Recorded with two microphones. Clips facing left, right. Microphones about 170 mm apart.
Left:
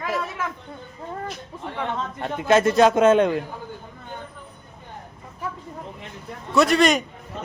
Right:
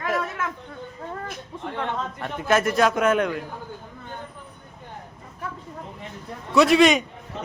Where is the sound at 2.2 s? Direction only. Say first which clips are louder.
Left 4 dB; 20° left (ahead or behind).